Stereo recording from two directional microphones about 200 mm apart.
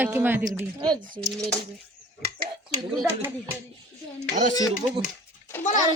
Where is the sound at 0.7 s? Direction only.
20° right (ahead or behind).